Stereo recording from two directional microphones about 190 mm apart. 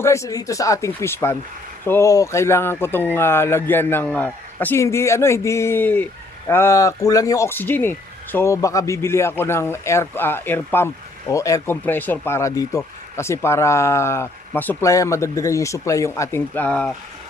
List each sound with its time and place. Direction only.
0.0 s speech: 15° left (ahead or behind)